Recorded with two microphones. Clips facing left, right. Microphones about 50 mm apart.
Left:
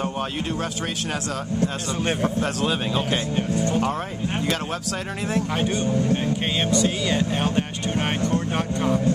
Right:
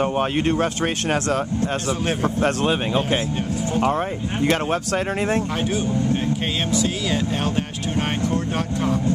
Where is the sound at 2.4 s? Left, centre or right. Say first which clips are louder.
Right 4 dB; right.